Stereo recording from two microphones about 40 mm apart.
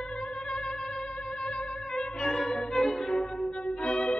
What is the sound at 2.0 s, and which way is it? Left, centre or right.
Music, centre.